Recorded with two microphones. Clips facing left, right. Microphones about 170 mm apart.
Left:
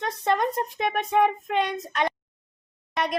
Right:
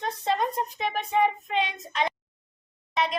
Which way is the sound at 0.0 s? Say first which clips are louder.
Left 2 dB; 65° left (ahead or behind).